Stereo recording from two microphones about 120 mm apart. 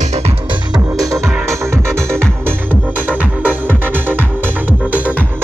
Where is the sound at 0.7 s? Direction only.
30° right (ahead or behind).